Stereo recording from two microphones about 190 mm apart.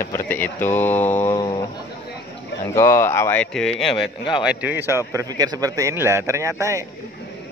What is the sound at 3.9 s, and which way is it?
Speech, 25° left (ahead or behind).